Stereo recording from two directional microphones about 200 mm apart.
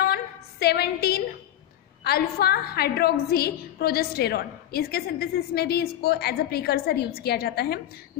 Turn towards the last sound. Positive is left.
turn(degrees=50)  # may be behind; listen again after turning